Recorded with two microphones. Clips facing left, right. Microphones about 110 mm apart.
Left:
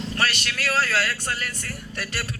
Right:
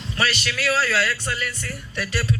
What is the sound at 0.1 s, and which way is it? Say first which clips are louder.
A man's voice: right 4 dB; 45° left (ahead or behind).